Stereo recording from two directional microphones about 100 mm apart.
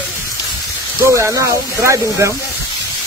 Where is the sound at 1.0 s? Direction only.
30° right (ahead or behind).